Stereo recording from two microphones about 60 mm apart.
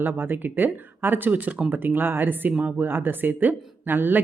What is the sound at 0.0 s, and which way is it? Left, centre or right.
A woman's voice, right.